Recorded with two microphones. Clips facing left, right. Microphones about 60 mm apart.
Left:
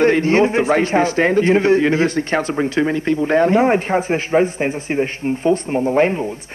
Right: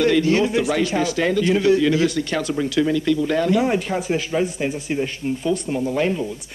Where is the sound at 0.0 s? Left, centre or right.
Left.